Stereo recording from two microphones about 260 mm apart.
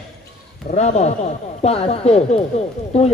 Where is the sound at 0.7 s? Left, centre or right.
Left.